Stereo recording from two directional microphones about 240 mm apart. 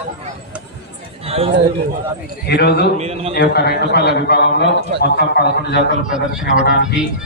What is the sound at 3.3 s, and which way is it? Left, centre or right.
A man's voice, left.